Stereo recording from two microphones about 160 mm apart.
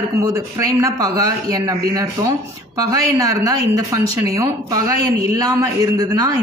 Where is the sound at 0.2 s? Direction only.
20° right (ahead or behind).